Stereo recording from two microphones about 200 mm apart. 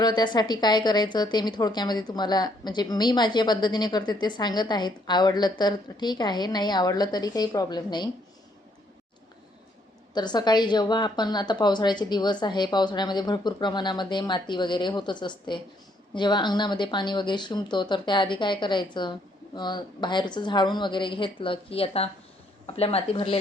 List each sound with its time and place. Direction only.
0.0 s a woman's voice: 20° left (ahead or behind)
10.2 s a woman's voice: 20° left (ahead or behind)